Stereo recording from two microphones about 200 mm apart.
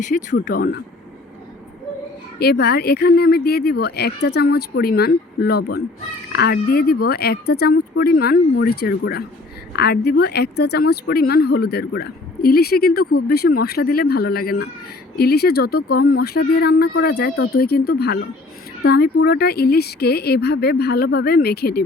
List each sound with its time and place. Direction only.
0.0 s speech: 40° left (ahead or behind)
0.4 s speech: 50° left (ahead or behind)
2.4 s speech: 55° left (ahead or behind)